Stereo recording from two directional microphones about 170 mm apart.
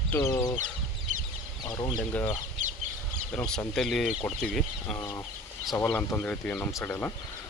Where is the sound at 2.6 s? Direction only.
45° right (ahead or behind).